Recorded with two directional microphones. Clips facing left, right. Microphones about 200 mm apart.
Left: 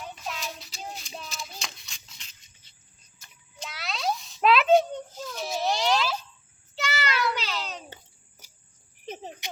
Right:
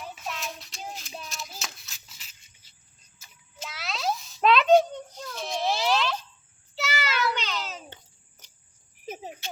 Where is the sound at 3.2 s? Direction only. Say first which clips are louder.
Even; 5° right (ahead or behind).